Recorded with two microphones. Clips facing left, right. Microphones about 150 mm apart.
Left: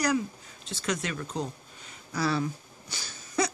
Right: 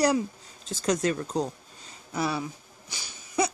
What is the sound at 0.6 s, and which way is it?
Speech, 45° right (ahead or behind).